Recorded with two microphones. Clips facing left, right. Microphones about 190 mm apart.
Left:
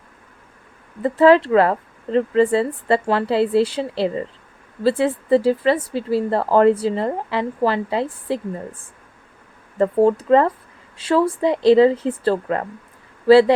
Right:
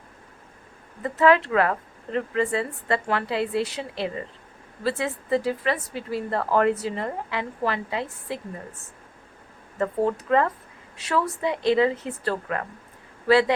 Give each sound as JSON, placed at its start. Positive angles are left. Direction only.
{"t": 1.0, "sound": "speech", "side_deg": 30}
{"t": 9.7, "sound": "speech", "side_deg": 30}